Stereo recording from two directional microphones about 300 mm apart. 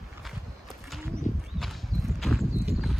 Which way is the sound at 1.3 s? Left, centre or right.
Left.